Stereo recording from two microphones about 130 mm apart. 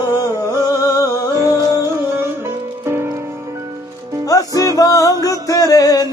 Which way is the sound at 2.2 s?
20° right (ahead or behind).